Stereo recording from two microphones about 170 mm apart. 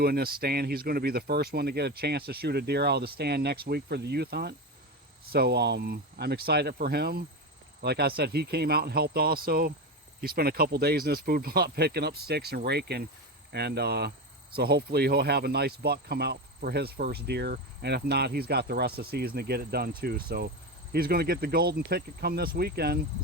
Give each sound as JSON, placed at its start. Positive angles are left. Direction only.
{"t": 0.0, "sound": "speech", "side_deg": -65}